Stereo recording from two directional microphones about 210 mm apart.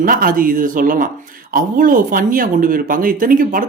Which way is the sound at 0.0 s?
45° right (ahead or behind).